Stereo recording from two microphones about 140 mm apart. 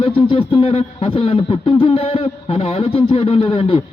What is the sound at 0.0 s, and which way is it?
Speech, 40° left (ahead or behind).